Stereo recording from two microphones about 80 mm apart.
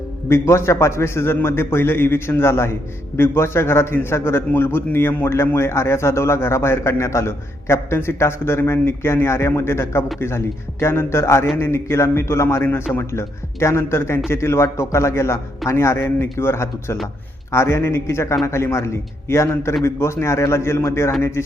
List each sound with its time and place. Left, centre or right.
0.3 s a man's voice: left